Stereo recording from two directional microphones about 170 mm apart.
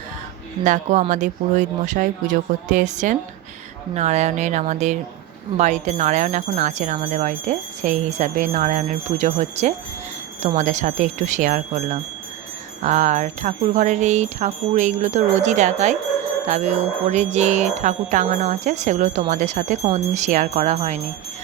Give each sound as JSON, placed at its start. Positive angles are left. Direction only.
{"t": 0.6, "sound": "speech", "side_deg": -45}